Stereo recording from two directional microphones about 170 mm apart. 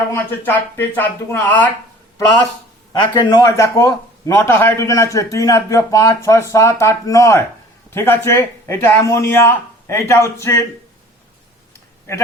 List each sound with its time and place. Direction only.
0.1 s a man's voice: 10° left (ahead or behind)
3.1 s a man's voice: 25° left (ahead or behind)